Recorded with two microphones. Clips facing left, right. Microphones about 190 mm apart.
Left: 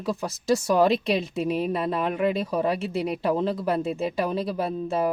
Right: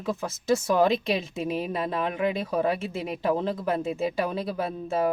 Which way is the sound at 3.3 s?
35° left (ahead or behind).